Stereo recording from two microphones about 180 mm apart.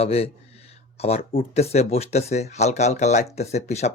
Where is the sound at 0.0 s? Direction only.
35° left (ahead or behind).